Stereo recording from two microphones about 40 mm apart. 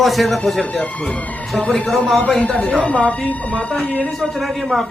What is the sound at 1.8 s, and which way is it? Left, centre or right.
Speech, centre.